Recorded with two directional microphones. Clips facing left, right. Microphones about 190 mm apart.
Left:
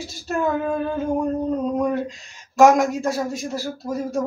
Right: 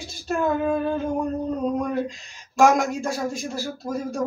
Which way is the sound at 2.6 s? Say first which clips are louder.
Left 4 dB; centre (ahead or behind).